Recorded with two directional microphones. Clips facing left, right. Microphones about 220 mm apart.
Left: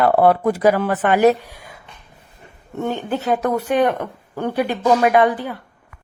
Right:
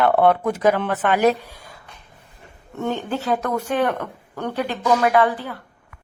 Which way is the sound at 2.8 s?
15° left (ahead or behind).